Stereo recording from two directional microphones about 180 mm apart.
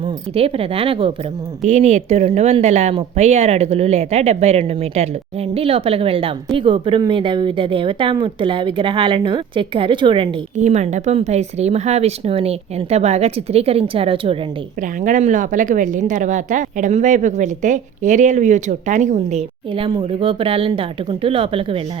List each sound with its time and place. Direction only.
0.0 s speech: 30° right (ahead or behind)
10.6 s speech: 40° right (ahead or behind)
14.8 s a woman's voice: 45° right (ahead or behind); by 21.8 s 30° right (ahead or behind)